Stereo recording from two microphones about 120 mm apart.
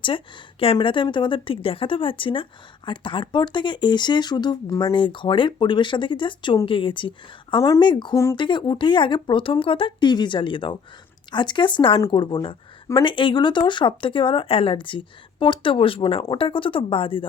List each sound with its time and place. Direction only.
0.0 s a woman's voice: 45° left (ahead or behind)
8.1 s speech: 25° left (ahead or behind)
8.4 s a woman's voice: 40° left (ahead or behind)